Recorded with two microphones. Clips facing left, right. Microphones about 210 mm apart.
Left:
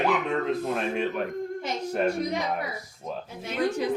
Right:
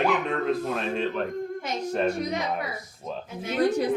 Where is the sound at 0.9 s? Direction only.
15° left (ahead or behind).